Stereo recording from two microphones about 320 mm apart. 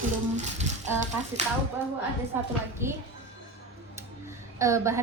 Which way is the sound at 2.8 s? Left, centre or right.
Centre.